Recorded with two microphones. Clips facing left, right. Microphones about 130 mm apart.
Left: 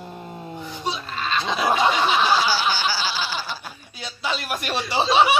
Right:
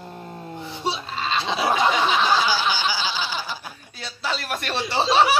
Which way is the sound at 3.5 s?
Centre (ahead or behind).